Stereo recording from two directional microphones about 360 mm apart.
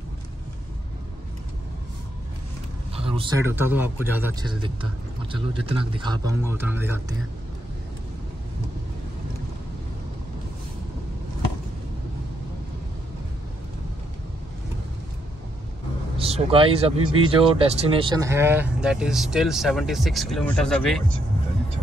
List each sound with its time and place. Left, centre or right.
3.0 s speech: centre
16.2 s speech: centre